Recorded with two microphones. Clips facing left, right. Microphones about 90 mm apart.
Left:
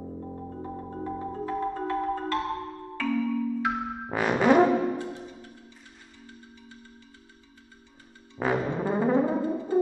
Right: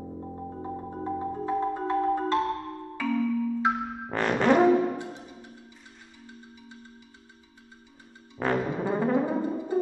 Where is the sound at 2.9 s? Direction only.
10° right (ahead or behind).